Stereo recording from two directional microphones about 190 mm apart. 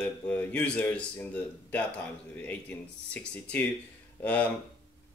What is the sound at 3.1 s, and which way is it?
Speech, 5° left (ahead or behind).